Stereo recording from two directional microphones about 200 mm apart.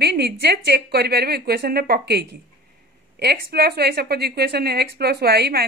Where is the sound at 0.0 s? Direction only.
55° right (ahead or behind).